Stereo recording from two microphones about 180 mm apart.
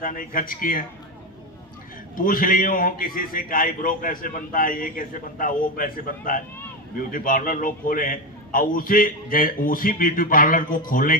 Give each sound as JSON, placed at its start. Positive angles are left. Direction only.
{"t": 0.0, "sound": "a man's voice", "side_deg": 50}
{"t": 2.1, "sound": "a man's voice", "side_deg": 50}